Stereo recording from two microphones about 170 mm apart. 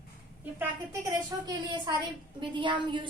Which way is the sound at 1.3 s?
20° right (ahead or behind).